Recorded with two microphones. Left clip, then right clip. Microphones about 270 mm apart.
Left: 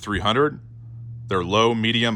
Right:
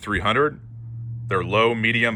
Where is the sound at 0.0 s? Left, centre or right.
Centre.